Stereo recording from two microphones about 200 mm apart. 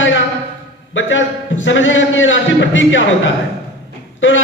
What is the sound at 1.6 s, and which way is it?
Speech, 70° left (ahead or behind).